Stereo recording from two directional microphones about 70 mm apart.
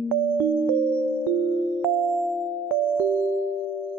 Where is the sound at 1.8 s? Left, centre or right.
Centre.